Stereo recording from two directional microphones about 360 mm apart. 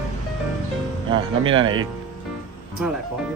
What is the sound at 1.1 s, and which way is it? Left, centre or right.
Speech, centre.